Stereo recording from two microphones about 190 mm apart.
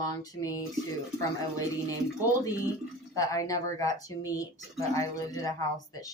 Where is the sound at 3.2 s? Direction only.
20° left (ahead or behind).